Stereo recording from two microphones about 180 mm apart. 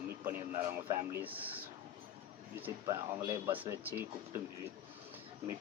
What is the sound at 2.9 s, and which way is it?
Speech, 20° right (ahead or behind).